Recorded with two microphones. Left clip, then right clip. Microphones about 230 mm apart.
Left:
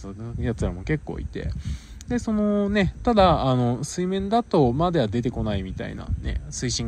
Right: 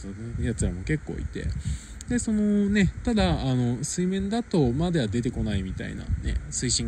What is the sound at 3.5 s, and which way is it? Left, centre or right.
Speech, left.